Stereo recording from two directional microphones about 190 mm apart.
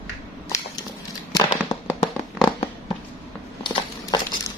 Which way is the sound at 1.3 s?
20° left (ahead or behind).